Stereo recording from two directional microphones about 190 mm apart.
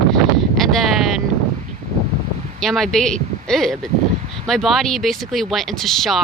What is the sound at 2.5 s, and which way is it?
Speech, centre (ahead or behind).